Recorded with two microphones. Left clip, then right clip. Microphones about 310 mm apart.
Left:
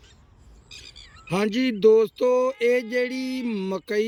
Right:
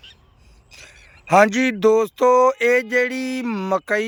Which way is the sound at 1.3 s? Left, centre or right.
Centre.